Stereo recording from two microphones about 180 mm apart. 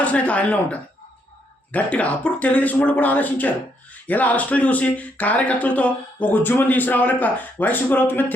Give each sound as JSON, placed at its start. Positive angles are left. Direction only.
{"t": 0.0, "sound": "speech", "side_deg": 5}